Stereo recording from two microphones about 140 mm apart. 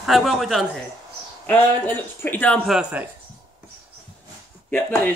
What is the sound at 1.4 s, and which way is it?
Speech, 15° left (ahead or behind).